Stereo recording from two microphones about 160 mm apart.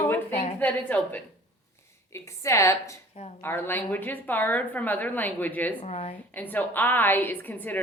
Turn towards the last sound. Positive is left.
turn(degrees=10)  # may be behind; listen again after turning